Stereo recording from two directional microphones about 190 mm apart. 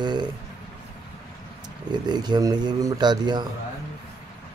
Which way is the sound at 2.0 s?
20° right (ahead or behind).